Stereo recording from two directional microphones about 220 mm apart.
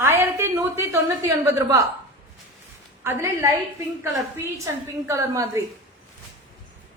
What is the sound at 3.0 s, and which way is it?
Speech, 15° right (ahead or behind).